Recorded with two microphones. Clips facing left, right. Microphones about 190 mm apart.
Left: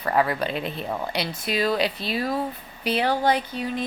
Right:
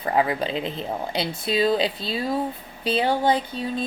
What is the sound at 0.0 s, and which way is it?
A woman's voice, 20° right (ahead or behind).